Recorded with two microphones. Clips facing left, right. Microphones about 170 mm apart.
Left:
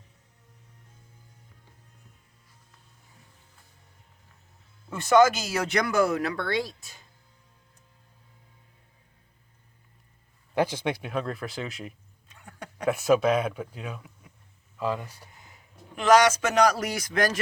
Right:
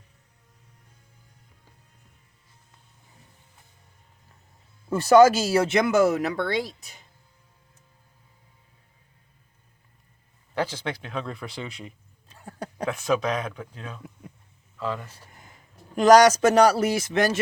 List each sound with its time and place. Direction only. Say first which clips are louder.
4.9 s speech: right 4 dB; 35° right (ahead or behind); by 7.0 s 20° right (ahead or behind)
10.5 s speech: left 3 dB; 15° left (ahead or behind)
12.3 s a sound: right 6 dB; 35° right (ahead or behind)
12.8 s speech: left 3 dB; 10° left (ahead or behind)
16.0 s speech: right 5 dB; 40° right (ahead or behind)